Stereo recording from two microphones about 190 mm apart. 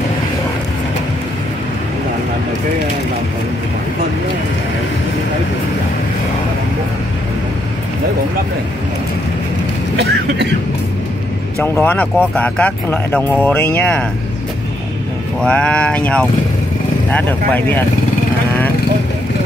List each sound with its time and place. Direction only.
9.9 s speech: 65° right (ahead or behind)
11.5 s speech: 10° left (ahead or behind)
15.4 s speech: 5° left (ahead or behind)